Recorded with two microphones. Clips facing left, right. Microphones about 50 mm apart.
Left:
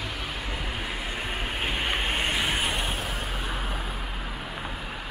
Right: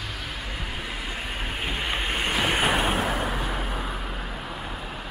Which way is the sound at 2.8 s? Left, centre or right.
Right.